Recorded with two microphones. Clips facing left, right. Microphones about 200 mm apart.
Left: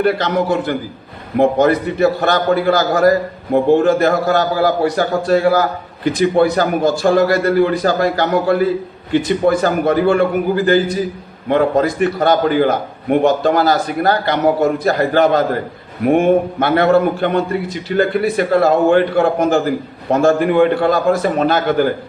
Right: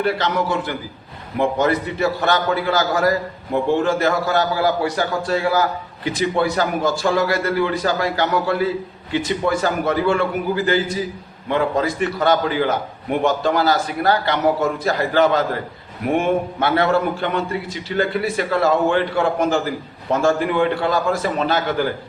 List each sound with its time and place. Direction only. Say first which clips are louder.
0.0 s a man's voice: left 5 dB; 55° left (ahead or behind)